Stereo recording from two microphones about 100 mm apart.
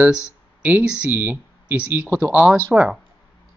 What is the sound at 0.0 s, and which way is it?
Speech, 10° right (ahead or behind).